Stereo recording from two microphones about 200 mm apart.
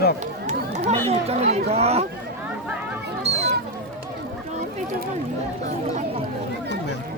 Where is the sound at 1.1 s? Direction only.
30° right (ahead or behind).